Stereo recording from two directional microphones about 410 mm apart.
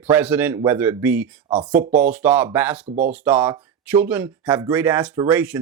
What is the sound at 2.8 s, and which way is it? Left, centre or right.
Speech, centre.